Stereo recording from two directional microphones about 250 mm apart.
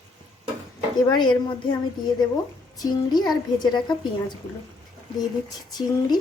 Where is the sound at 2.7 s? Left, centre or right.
Centre.